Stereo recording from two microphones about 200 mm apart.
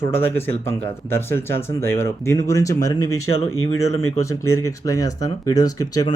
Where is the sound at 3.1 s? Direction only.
90° left.